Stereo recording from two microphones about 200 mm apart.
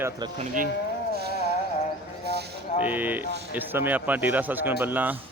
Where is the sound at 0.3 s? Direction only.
40° right (ahead or behind).